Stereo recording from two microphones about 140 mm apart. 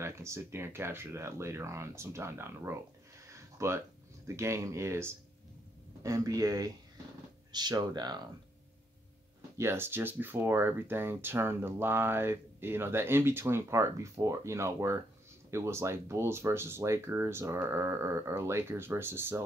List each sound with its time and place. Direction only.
0.0 s speech: 20° right (ahead or behind)
3.3 s a sound: 20° right (ahead or behind)
4.4 s speech: 20° right (ahead or behind)
9.6 s speech: 15° right (ahead or behind)